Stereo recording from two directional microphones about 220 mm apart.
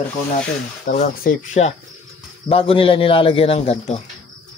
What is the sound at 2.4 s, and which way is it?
A man's voice, 25° left (ahead or behind).